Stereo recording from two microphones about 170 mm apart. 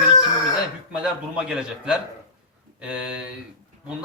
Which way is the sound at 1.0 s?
5° right (ahead or behind).